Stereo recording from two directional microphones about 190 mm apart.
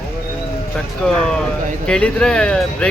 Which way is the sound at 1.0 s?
5° left (ahead or behind).